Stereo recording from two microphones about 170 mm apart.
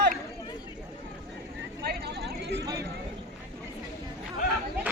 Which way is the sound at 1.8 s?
75° right (ahead or behind).